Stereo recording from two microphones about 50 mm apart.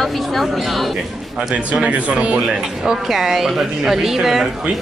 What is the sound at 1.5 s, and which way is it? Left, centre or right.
Speech, right.